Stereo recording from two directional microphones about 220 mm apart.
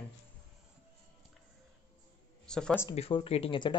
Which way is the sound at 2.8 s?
25° left (ahead or behind).